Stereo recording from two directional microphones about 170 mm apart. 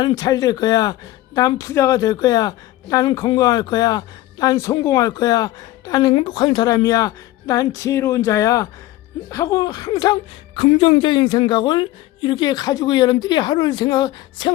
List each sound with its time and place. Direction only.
0.0 s speech: 25° left (ahead or behind)